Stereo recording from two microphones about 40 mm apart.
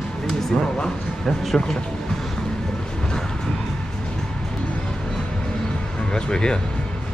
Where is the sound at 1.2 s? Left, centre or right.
Centre.